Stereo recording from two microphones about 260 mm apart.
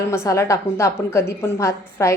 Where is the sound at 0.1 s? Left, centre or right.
Centre.